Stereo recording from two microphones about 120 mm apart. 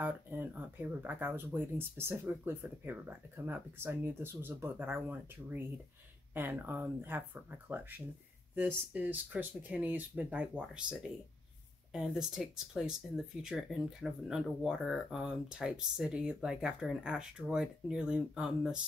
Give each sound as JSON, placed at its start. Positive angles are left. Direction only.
{"t": 0.0, "sound": "speech", "side_deg": -15}